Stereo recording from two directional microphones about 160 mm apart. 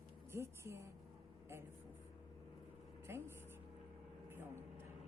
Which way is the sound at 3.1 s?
15° right (ahead or behind).